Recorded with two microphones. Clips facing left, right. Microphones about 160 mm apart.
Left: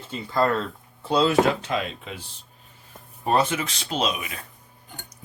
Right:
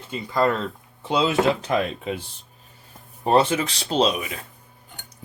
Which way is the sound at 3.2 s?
30° right (ahead or behind).